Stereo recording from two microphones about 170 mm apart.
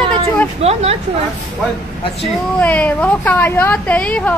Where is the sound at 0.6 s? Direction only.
35° right (ahead or behind).